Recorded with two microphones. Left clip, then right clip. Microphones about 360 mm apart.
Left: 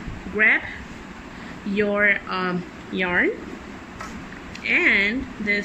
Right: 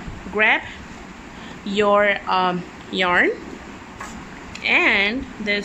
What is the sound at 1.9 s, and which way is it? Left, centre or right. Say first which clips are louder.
Speech: right 1 dB; centre.